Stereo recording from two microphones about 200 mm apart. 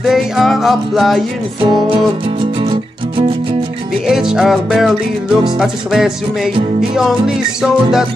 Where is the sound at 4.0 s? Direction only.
5° right (ahead or behind).